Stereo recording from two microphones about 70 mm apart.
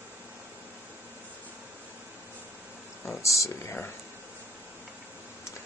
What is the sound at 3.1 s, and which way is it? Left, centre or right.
Speech, left.